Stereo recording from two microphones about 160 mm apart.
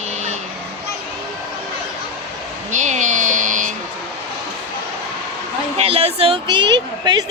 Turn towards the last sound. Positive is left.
turn(degrees=-25)  # may be behind; listen again after turning